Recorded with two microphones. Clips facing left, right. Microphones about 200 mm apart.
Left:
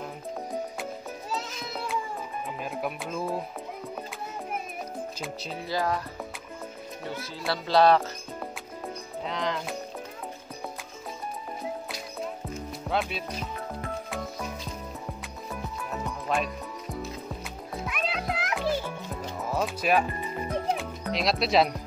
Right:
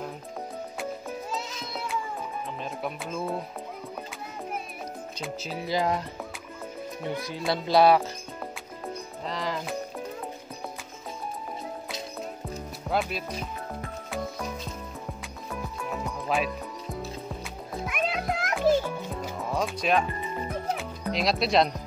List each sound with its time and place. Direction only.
2.4 s music: 5° left (ahead or behind)
5.7 s speech: 20° right (ahead or behind)
7.1 s speech: 15° right (ahead or behind)
8.8 s music: centre (ahead or behind)
12.9 s speech: 5° right (ahead or behind)
16.3 s speech: centre (ahead or behind)
17.8 s music: 50° right (ahead or behind)
19.5 s speech: 5° left (ahead or behind)
20.7 s music: centre (ahead or behind)